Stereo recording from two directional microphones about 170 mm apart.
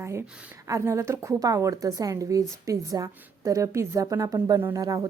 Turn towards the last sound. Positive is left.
turn(degrees=-20)  # may be behind; listen again after turning